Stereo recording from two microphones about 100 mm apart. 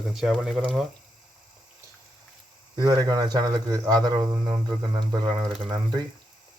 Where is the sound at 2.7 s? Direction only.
40° right (ahead or behind).